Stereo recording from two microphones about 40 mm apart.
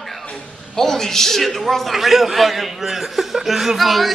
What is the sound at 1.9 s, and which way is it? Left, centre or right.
Speech, centre.